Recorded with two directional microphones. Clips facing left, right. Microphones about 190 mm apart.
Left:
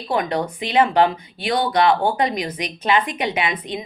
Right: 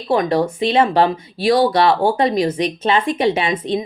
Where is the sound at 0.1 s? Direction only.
25° right (ahead or behind).